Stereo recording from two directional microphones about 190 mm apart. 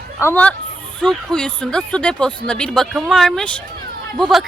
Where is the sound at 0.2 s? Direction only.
10° left (ahead or behind).